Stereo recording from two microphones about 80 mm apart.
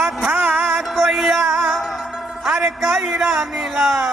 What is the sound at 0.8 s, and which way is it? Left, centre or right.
Music, centre.